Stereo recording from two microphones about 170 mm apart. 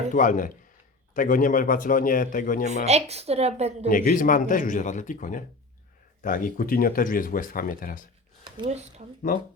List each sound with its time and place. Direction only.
0.1 s a man's voice: 50° left (ahead or behind)
2.6 s a woman's voice: 40° right (ahead or behind)
3.8 s a man's voice: 50° left (ahead or behind)
8.4 s speech: 30° right (ahead or behind)